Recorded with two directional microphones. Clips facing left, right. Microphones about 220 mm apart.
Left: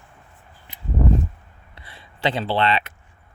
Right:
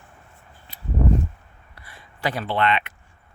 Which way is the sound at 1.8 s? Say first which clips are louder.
Left 4 dB; 25° left (ahead or behind).